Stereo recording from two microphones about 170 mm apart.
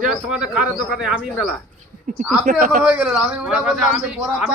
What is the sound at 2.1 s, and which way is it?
Speech, 50° right (ahead or behind).